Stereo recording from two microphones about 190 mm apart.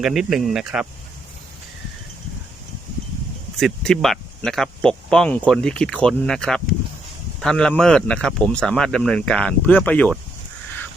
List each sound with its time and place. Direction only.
0.0 s speech: centre (ahead or behind)
3.6 s speech: centre (ahead or behind)